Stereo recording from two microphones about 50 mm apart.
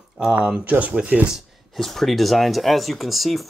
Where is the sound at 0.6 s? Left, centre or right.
Right.